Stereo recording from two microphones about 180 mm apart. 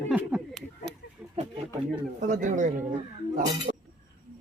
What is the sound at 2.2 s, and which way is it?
Speech, 45° right (ahead or behind).